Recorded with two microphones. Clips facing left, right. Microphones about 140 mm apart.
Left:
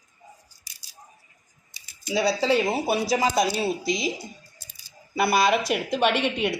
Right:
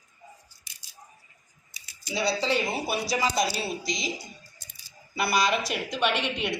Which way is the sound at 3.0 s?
50° left (ahead or behind).